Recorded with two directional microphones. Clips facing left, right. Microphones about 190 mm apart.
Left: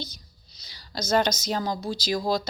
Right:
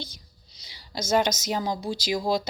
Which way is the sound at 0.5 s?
20° right (ahead or behind).